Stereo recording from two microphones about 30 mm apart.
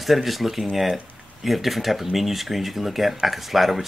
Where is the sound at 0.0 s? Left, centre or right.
Centre.